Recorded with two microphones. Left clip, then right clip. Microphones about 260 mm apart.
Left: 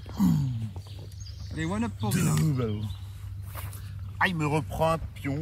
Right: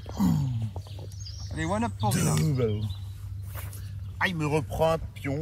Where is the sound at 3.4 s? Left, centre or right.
Left; by 5.4 s centre.